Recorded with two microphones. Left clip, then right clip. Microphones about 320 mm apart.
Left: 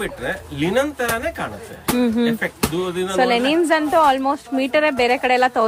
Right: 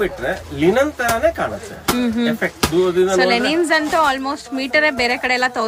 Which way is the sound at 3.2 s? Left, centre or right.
Centre.